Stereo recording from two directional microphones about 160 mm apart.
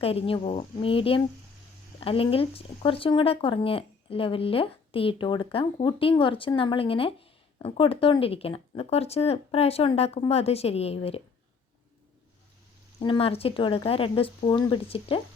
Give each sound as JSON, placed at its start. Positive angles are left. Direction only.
{"t": 0.0, "sound": "speech", "side_deg": 35}
{"t": 13.0, "sound": "speech", "side_deg": 35}